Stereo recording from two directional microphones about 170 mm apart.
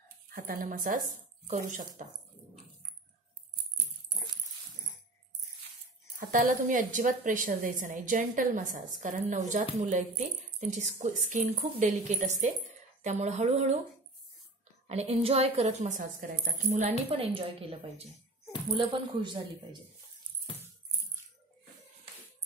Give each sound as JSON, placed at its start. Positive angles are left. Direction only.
{"t": 0.3, "sound": "a woman's voice", "side_deg": -60}
{"t": 6.1, "sound": "a woman's voice", "side_deg": -50}
{"t": 14.9, "sound": "speech", "side_deg": -35}
{"t": 17.1, "sound": "a man's voice", "side_deg": -30}